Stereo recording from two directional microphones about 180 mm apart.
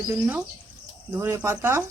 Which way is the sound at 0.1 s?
10° right (ahead or behind).